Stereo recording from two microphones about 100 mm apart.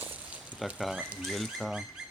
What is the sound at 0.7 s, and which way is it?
Speech, centre (ahead or behind).